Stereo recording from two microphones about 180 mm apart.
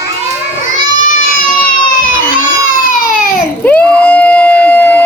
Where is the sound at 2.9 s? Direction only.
50° left (ahead or behind).